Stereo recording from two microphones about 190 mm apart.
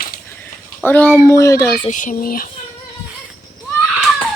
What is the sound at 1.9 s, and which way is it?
Speech, 40° left (ahead or behind).